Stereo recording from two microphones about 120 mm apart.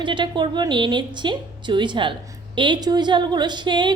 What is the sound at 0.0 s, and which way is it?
A woman's voice, 40° right (ahead or behind).